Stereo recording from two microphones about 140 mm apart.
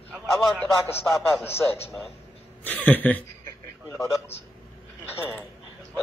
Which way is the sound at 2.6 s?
10° left (ahead or behind).